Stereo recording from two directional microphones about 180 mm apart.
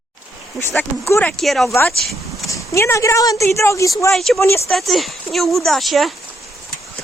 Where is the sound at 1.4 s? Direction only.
Centre (ahead or behind).